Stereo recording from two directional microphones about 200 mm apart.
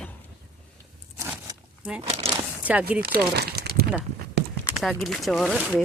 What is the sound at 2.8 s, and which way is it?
Speech, 50° right (ahead or behind).